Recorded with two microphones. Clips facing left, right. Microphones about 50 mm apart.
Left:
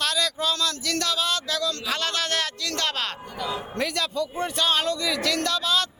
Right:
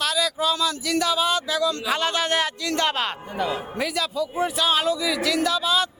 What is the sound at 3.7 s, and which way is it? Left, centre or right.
A man's voice, centre.